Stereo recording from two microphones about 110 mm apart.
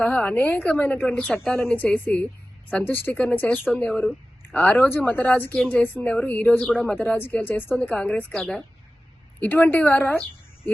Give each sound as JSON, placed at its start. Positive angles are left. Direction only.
{"t": 0.0, "sound": "a woman's voice", "side_deg": 10}